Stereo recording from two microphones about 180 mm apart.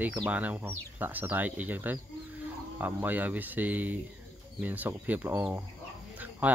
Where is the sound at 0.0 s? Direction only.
10° right (ahead or behind).